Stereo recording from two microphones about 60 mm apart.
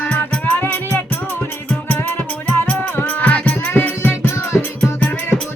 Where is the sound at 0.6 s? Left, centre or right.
Left.